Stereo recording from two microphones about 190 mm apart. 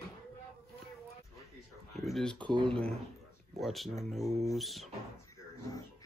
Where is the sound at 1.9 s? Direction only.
Centre (ahead or behind).